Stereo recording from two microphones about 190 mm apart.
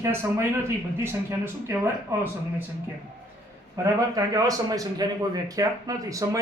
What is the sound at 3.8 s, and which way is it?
A man's voice, 20° right (ahead or behind).